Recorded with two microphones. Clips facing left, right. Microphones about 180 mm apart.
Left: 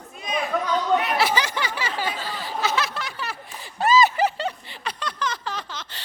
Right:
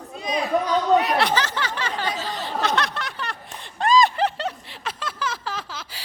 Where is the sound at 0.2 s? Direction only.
35° right (ahead or behind).